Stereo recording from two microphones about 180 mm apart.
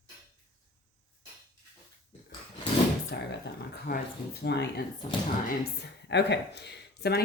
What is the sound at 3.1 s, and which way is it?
Speech, 65° left (ahead or behind).